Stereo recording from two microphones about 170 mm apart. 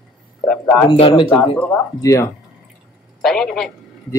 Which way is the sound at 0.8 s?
30° left (ahead or behind).